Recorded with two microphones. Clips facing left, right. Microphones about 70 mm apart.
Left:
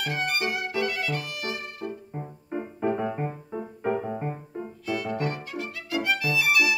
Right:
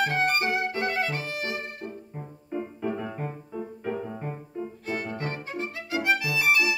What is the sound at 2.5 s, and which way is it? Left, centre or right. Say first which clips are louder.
Music: left 3 dB; left.